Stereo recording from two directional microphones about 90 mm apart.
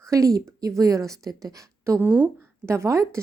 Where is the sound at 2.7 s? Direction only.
35° right (ahead or behind).